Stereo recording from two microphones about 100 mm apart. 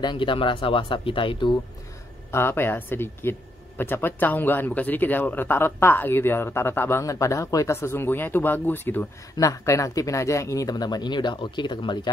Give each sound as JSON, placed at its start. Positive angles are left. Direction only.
{"t": 0.0, "sound": "speech", "side_deg": 50}
{"t": 2.3, "sound": "speech", "side_deg": 25}
{"t": 9.4, "sound": "speech", "side_deg": 35}